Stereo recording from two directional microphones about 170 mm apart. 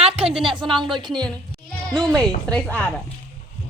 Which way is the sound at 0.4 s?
30° right (ahead or behind).